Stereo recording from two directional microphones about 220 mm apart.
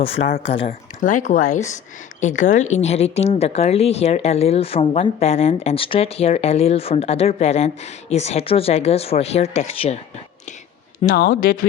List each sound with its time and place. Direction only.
0.0 s speech: 25° left (ahead or behind)
11.1 s speech: 45° left (ahead or behind)